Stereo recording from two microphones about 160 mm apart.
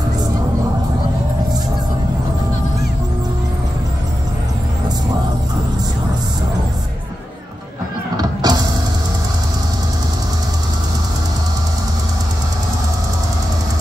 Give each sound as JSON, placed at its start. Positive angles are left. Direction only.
{"t": 8.2, "sound": "music", "side_deg": -25}